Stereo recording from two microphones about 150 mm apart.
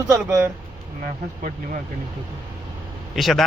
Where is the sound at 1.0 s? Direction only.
60° right (ahead or behind).